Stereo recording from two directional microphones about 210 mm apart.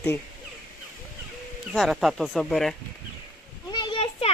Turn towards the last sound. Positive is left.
turn(degrees=25)  # may be behind; listen again after turning